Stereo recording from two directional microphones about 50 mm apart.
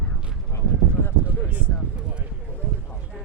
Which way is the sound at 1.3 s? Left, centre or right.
Right.